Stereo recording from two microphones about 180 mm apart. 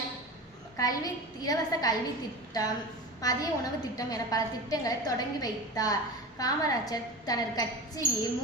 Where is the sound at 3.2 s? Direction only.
20° left (ahead or behind).